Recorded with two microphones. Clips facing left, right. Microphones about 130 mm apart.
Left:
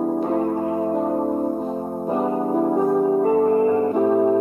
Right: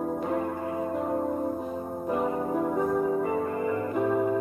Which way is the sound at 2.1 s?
30° left (ahead or behind).